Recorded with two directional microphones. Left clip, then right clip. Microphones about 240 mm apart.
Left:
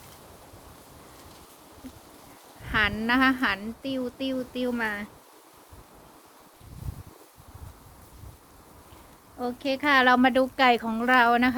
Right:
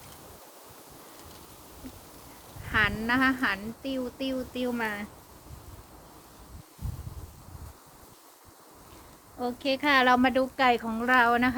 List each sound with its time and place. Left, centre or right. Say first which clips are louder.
2.6 s speech: left 1 dB; left; by 5.0 s centre
9.4 s speech: left 1 dB; centre
10.4 s speech: left 3 dB; left